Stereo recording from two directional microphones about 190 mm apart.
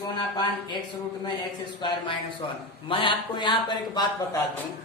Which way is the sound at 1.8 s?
25° left (ahead or behind).